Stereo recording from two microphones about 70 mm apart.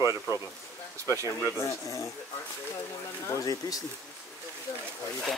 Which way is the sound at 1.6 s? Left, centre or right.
Left.